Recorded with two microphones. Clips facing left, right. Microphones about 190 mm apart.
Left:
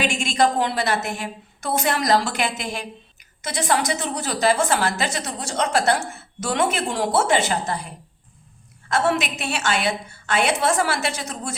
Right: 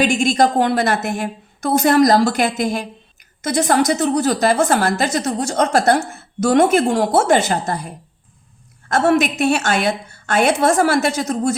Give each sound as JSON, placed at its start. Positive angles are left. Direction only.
{"t": 0.0, "sound": "a woman's voice", "side_deg": -40}